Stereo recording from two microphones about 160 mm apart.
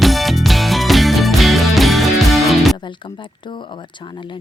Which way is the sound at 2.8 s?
30° left (ahead or behind).